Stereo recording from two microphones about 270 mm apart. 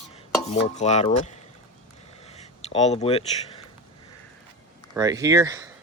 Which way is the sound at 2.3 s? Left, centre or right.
Left.